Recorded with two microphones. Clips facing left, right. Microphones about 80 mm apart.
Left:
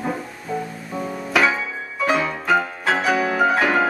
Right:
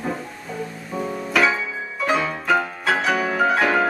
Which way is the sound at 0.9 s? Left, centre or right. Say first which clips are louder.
Even; centre.